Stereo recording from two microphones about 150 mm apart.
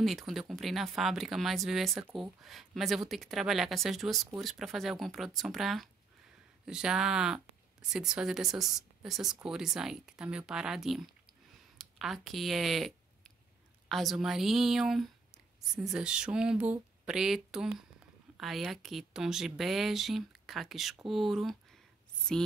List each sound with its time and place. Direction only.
0.0 s speech: centre (ahead or behind)